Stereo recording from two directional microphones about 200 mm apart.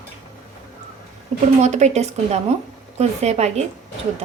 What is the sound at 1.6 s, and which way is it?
A woman's voice, 35° right (ahead or behind).